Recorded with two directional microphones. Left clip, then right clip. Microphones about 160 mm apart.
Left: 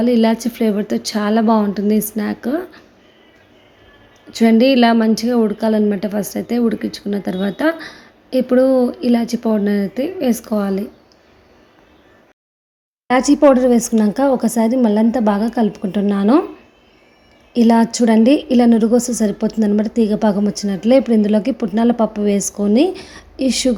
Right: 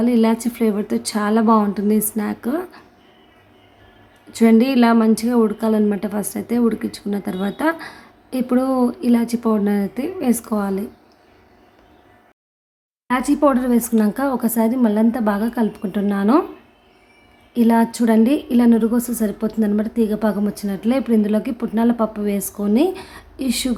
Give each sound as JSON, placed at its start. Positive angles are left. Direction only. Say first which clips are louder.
{"t": 0.0, "sound": "speech", "louder": "left 3 dB", "side_deg": 10}
{"t": 4.3, "sound": "a woman's voice", "louder": "left 3 dB", "side_deg": 5}
{"t": 13.1, "sound": "speech", "louder": "left 5 dB", "side_deg": 15}
{"t": 17.5, "sound": "speech", "louder": "left 3 dB", "side_deg": 20}